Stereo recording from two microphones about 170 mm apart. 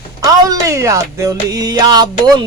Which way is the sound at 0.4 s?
20° right (ahead or behind).